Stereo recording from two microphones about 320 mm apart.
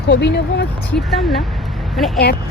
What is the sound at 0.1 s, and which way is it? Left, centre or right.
Speech, left.